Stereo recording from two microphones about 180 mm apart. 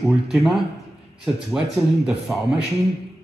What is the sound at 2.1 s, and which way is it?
Speech, 5° right (ahead or behind).